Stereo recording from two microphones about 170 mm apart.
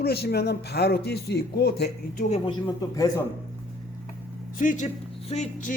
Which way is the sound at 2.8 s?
20° left (ahead or behind).